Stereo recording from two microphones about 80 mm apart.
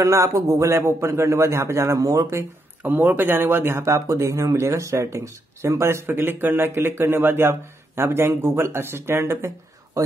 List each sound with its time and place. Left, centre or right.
0.0 s speech: right
2.8 s speech: right